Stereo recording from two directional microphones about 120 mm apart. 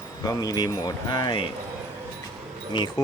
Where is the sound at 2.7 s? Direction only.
35° left (ahead or behind).